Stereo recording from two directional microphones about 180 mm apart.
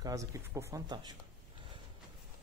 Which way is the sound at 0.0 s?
20° right (ahead or behind).